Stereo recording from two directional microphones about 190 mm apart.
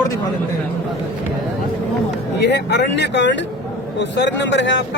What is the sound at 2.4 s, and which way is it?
Speech, 65° left (ahead or behind).